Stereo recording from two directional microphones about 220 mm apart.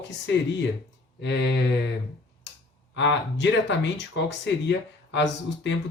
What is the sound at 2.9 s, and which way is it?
Speech, 55° left (ahead or behind).